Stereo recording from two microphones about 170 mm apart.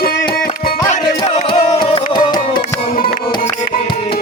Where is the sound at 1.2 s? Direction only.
40° left (ahead or behind).